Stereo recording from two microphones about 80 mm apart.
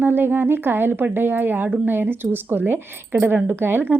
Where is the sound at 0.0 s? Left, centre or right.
Right.